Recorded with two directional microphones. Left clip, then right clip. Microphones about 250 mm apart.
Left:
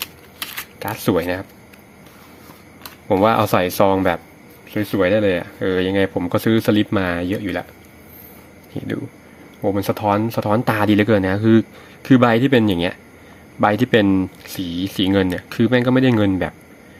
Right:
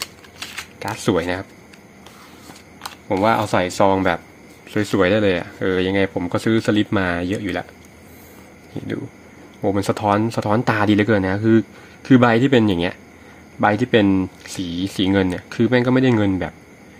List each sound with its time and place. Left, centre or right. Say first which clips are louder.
0.8 s speech: left 1 dB; centre
3.1 s speech: left 2 dB; centre
4.7 s speech: even; centre
9.6 s speech: even; centre